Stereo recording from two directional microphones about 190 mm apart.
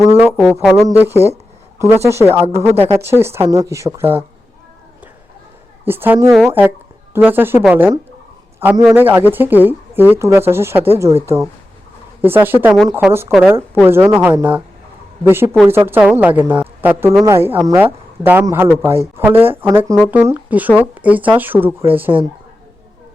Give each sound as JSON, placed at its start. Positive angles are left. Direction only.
{"t": 0.2, "sound": "music", "side_deg": -10}
{"t": 0.9, "sound": "speech", "side_deg": -10}
{"t": 5.8, "sound": "speech", "side_deg": -10}
{"t": 8.5, "sound": "a sound", "side_deg": -15}
{"t": 8.9, "sound": "speech", "side_deg": -10}
{"t": 12.2, "sound": "speech", "side_deg": -10}